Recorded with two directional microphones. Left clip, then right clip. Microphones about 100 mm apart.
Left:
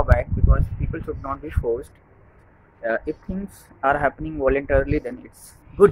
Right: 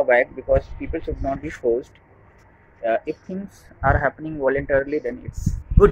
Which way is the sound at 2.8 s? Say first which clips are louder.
Right 2 dB; 30° left (ahead or behind).